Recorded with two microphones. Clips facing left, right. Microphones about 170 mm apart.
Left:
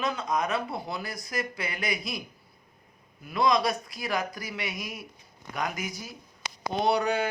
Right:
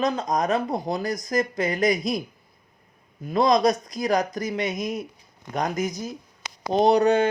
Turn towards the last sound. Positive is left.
turn(degrees=-40)  # may be behind; listen again after turning